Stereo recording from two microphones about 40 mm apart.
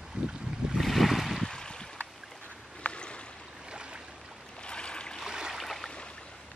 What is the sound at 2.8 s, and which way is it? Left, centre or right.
Boat, left.